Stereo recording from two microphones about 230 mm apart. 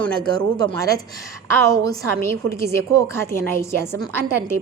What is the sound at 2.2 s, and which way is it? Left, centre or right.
A woman's voice, centre.